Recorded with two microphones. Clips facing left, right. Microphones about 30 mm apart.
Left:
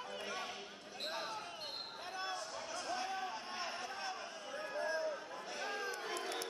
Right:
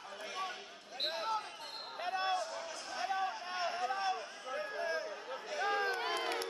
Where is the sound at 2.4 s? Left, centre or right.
Centre.